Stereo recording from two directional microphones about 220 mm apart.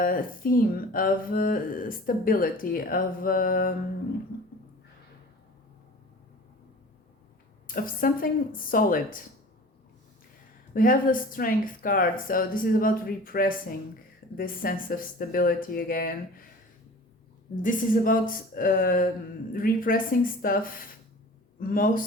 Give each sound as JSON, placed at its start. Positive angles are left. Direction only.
{"t": 0.0, "sound": "speech", "side_deg": 40}
{"t": 7.7, "sound": "speech", "side_deg": 40}
{"t": 10.8, "sound": "speech", "side_deg": 40}
{"t": 17.5, "sound": "speech", "side_deg": 35}